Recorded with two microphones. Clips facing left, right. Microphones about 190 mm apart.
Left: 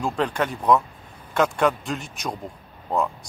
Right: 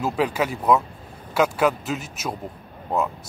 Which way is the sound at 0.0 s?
5° right (ahead or behind).